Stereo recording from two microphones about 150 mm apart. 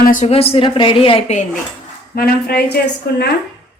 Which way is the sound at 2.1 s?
90° left.